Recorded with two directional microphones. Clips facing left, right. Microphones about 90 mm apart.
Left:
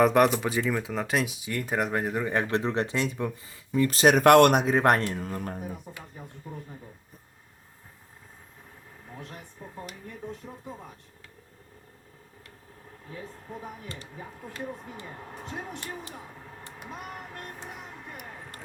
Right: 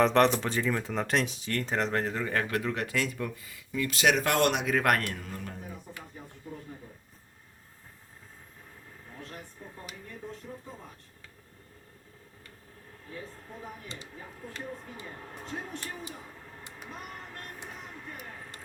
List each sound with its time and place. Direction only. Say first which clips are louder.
0.0 s speech: left 2 dB; 10° left (ahead or behind); by 4.2 s 40° left (ahead or behind)
4.2 s speech: left 10 dB; 60° left (ahead or behind)
4.6 s speech: left 4 dB; 30° left (ahead or behind)
5.2 s speech: left 7 dB; 40° left (ahead or behind)